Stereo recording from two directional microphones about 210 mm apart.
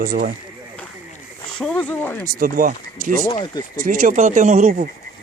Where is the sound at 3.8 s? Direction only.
40° right (ahead or behind).